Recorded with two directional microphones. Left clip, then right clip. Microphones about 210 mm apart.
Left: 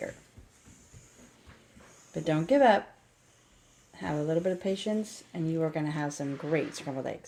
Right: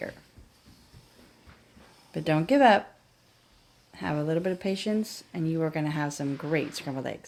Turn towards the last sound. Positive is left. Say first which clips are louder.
# right 1 dB
turn(degrees=-45)  # may be behind; listen again after turning